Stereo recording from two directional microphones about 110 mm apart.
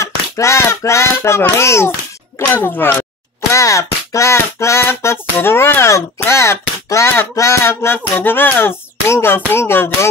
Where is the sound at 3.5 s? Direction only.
30° left (ahead or behind).